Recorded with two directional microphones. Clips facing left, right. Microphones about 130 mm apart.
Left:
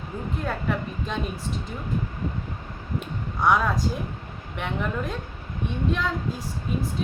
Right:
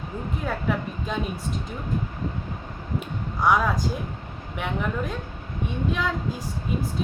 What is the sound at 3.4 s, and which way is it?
A woman's voice, centre (ahead or behind).